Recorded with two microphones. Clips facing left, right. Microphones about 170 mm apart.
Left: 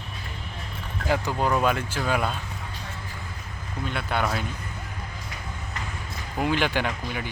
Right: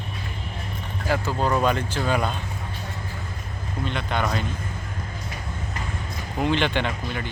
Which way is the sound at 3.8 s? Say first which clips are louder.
Right 1 dB; 5° left (ahead or behind).